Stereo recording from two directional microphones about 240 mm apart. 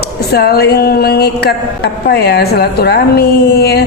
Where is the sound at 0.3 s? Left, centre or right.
Left.